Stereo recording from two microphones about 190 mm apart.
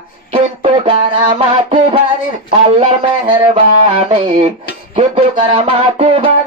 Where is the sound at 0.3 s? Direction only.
30° right (ahead or behind).